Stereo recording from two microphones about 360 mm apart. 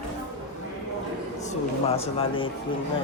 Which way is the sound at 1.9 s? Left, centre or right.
Centre.